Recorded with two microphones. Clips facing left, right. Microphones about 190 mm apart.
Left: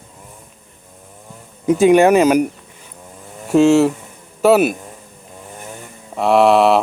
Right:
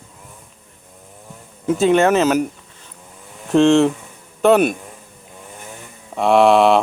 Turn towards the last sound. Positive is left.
turn(degrees=0)  # may be behind; listen again after turning